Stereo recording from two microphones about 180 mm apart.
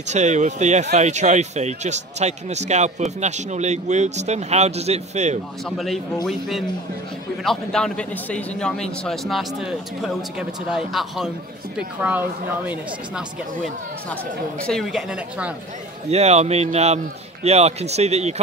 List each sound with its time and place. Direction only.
0.1 s speech: 40° right (ahead or behind)
5.7 s a man's voice: centre (ahead or behind)
7.4 s a man's voice: 5° left (ahead or behind)
14.7 s a man's voice: centre (ahead or behind)
16.1 s speech: 35° right (ahead or behind)